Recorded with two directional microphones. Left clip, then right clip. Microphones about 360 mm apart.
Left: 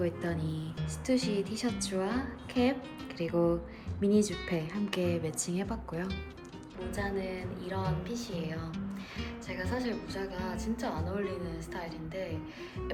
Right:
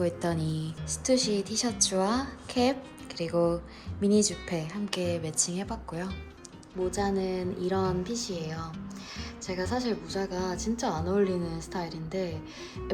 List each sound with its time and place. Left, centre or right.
0.0 s a woman's voice: centre